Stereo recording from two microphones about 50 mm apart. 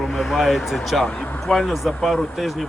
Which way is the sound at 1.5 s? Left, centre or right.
Centre.